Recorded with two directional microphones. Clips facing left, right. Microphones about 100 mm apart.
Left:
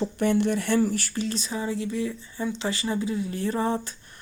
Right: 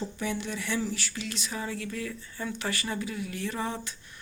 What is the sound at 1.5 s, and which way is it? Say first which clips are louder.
Speech: left 5 dB; 20° left (ahead or behind).